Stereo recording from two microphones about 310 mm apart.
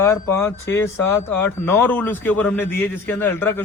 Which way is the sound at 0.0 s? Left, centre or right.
Centre.